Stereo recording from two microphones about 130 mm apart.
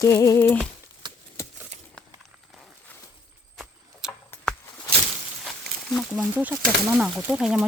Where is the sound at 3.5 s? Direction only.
5° right (ahead or behind).